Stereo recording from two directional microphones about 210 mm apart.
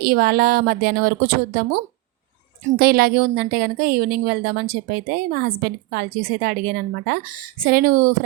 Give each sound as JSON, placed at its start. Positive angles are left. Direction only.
{"t": 0.0, "sound": "a woman's voice", "side_deg": -45}